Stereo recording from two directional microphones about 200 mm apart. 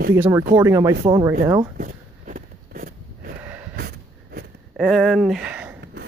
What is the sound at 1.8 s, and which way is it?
Walk, 45° right (ahead or behind).